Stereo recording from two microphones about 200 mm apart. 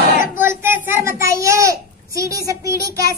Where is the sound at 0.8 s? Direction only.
15° right (ahead or behind).